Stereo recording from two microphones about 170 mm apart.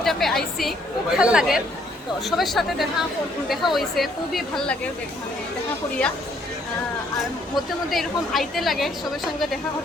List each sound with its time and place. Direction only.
0.0 s a woman's voice: centre (ahead or behind)
7.2 s a woman's voice: centre (ahead or behind)